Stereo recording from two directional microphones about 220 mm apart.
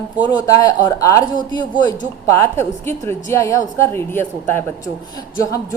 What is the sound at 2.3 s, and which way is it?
A woman's voice, 10° left (ahead or behind).